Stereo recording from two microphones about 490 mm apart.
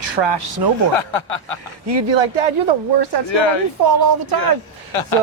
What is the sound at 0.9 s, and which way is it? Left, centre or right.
Speech, left.